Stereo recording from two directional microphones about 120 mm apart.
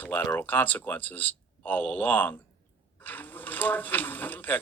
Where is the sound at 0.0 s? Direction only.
15° left (ahead or behind).